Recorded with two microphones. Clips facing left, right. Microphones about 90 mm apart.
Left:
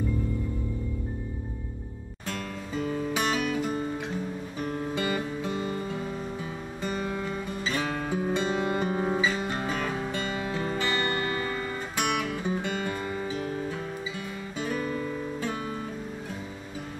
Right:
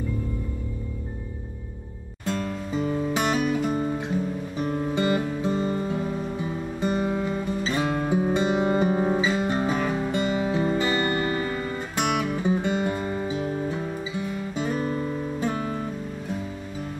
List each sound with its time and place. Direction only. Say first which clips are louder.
2.2 s music: right 7 dB; 20° right (ahead or behind)
4.6 s guitar: right 5 dB; 10° right (ahead or behind)
12.0 s music: right 4 dB; 15° right (ahead or behind)
14.8 s guitar: right 4 dB; 35° right (ahead or behind)